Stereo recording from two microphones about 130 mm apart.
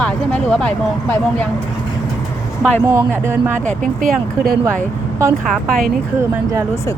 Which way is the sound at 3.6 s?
90° right.